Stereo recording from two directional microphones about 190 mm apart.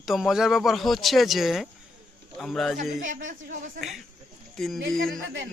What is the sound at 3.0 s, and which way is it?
Speech, 45° right (ahead or behind).